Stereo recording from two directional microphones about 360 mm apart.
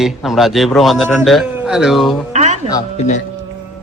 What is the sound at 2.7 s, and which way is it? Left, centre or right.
Speech, centre.